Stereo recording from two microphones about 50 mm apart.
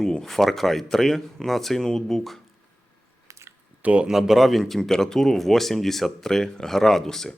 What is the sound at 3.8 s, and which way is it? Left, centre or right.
Speech, right.